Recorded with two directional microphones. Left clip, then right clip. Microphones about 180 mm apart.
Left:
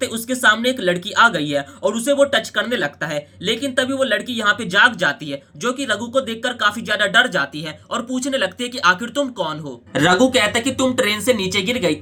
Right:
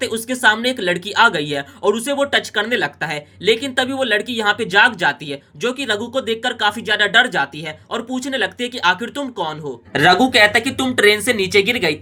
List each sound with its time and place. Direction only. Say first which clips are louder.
0.0 s speech: right 1 dB; 15° right (ahead or behind)